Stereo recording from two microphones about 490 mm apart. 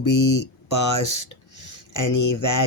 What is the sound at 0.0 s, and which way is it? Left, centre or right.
Speech, left.